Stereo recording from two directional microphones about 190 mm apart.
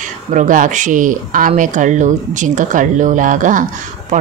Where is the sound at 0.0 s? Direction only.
40° right (ahead or behind).